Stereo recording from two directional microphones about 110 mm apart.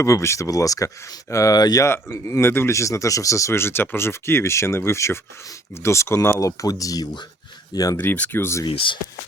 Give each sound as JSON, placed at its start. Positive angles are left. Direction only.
{"t": 0.0, "sound": "speech", "side_deg": 25}
{"t": 7.9, "sound": "speech", "side_deg": 15}
{"t": 8.7, "sound": "speech", "side_deg": 50}